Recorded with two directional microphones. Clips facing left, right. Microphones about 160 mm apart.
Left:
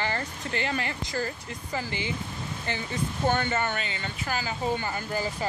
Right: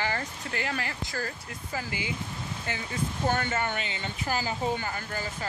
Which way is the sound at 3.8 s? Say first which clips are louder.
Even; 20° right (ahead or behind).